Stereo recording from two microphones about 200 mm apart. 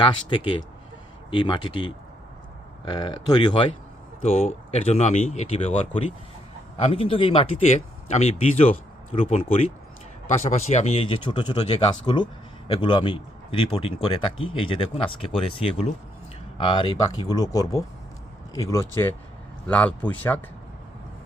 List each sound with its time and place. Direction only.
0.0 s speech: 25° left (ahead or behind); by 20.4 s 10° left (ahead or behind)